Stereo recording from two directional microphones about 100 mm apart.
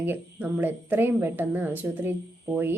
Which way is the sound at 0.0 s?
20° right (ahead or behind).